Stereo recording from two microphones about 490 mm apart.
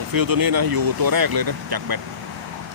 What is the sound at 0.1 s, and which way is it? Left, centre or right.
Speech, right.